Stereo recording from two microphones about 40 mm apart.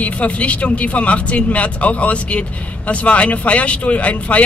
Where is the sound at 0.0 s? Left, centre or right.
Left.